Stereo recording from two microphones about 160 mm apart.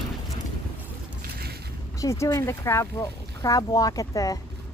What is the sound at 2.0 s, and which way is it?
Speech, 20° left (ahead or behind).